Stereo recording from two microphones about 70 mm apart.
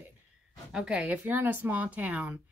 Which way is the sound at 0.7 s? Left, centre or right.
Centre.